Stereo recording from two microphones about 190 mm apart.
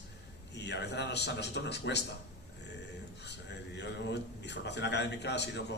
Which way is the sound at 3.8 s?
65° left (ahead or behind).